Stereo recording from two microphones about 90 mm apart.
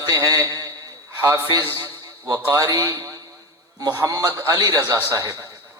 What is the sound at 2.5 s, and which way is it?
A man's voice, 40° right (ahead or behind).